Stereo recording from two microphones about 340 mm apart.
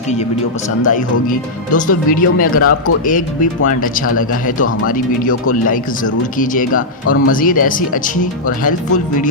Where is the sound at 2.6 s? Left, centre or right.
Left.